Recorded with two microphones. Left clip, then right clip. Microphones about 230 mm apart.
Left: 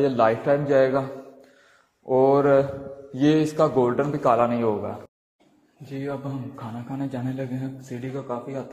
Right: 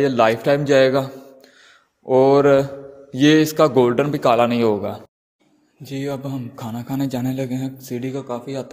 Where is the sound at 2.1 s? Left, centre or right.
Right.